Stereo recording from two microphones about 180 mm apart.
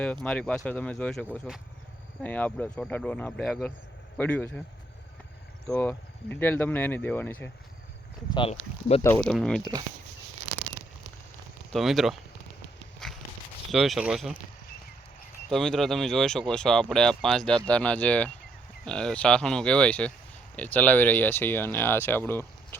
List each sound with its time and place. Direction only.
0.3 s speech: 5° left (ahead or behind)
5.6 s speech: 5° left (ahead or behind)
8.3 s speech: 30° left (ahead or behind)
9.2 s speech: 5° left (ahead or behind)
11.7 s speech: centre (ahead or behind)
13.7 s speech: centre (ahead or behind)
15.4 s speech: centre (ahead or behind)